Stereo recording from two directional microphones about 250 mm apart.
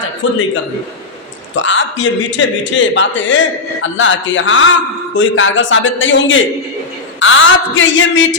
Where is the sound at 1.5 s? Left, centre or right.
Left.